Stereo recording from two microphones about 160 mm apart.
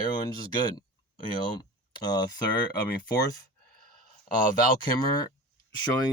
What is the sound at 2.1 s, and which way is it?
Speech, 25° left (ahead or behind).